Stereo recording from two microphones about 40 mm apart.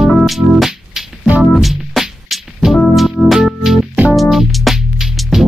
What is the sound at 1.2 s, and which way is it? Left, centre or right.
Organ, right.